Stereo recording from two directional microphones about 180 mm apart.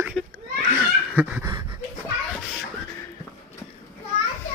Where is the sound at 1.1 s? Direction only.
10° right (ahead or behind).